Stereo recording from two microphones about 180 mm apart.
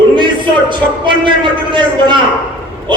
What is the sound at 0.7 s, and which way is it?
Speech, 25° right (ahead or behind).